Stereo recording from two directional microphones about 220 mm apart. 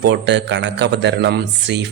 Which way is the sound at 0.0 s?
50° right (ahead or behind).